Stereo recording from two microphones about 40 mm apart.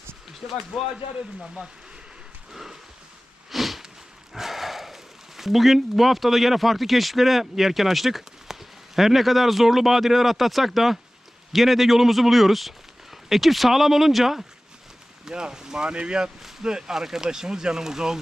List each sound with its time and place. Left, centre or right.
0.7 s speech: centre
2.5 s horse: centre
3.5 s a sound: centre
5.4 s speech: centre
15.2 s speech: centre